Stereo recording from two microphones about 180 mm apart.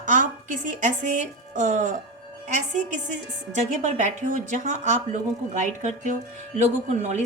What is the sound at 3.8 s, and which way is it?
A woman's voice, 40° right (ahead or behind).